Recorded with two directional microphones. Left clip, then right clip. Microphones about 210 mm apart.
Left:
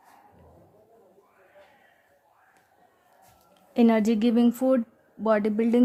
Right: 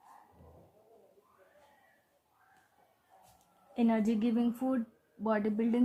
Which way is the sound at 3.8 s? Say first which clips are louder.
Left 9 dB; 50° left (ahead or behind).